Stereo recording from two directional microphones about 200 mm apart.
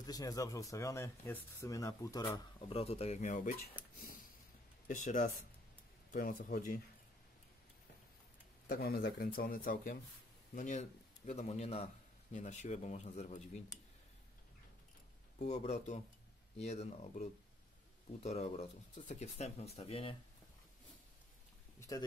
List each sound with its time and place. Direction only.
0.0 s speech: 20° left (ahead or behind); by 3.5 s 40° left (ahead or behind)
3.9 s a sound: 45° left (ahead or behind)
4.8 s speech: 40° left (ahead or behind)
8.6 s a man's voice: 45° left (ahead or behind)
15.3 s speech: 35° left (ahead or behind)
21.7 s speech: 15° left (ahead or behind)